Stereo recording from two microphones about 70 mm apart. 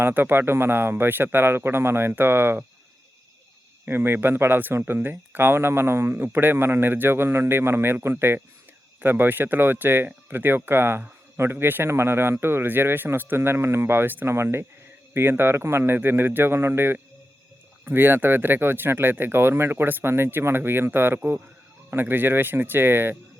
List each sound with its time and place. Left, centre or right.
0.0 s speech: right
3.8 s speech: right